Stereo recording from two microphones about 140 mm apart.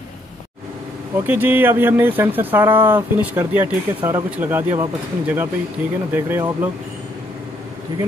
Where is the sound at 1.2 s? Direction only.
15° right (ahead or behind).